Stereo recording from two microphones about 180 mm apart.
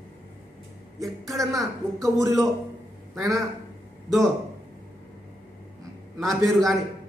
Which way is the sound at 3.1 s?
Centre (ahead or behind).